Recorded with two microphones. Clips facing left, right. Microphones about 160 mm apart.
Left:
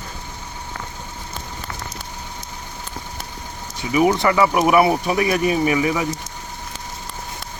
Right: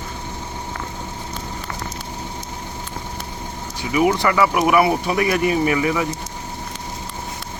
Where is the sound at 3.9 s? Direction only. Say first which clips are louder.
Left 1 dB; 20° left (ahead or behind).